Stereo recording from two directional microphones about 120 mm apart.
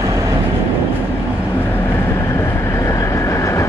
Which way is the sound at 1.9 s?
20° left (ahead or behind).